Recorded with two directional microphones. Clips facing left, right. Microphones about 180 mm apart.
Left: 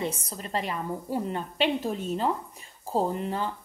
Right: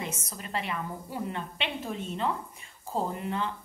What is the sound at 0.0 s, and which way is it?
A woman's voice, 35° left (ahead or behind).